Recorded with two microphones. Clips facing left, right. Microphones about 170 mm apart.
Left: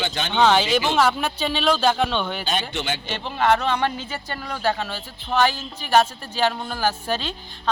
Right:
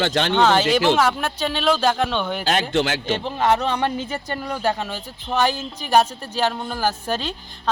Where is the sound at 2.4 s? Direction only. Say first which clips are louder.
Right 6 dB; 90° right.